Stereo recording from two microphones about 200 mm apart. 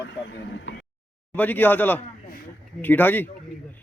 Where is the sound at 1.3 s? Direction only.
10° left (ahead or behind).